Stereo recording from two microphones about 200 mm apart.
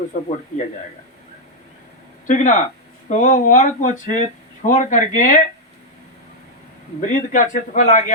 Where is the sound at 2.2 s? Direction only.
40° left (ahead or behind).